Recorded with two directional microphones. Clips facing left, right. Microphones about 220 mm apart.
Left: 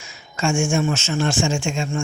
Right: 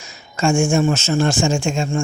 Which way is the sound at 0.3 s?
40° right (ahead or behind).